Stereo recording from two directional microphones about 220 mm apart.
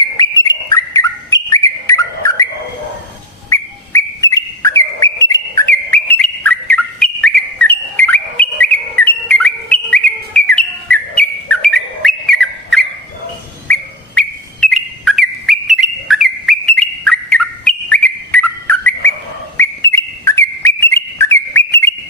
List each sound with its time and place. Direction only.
0.2 s bird: 15° left (ahead or behind)
3.5 s bird: 15° left (ahead or behind)
14.2 s bird: centre (ahead or behind)